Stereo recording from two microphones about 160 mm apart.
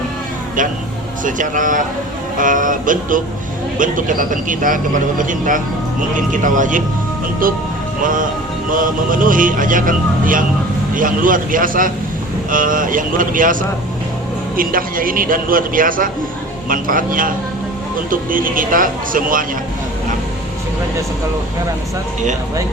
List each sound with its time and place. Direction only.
1.2 s speech: 55° right (ahead or behind)